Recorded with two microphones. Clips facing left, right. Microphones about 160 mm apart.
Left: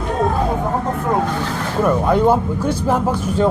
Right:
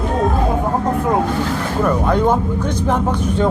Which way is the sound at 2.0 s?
10° left (ahead or behind).